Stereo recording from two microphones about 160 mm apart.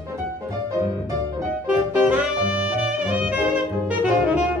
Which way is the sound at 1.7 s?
10° right (ahead or behind).